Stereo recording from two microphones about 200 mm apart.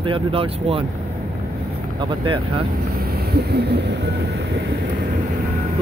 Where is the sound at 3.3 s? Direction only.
55° right (ahead or behind).